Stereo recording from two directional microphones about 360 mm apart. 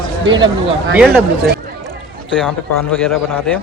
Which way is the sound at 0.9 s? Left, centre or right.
Centre.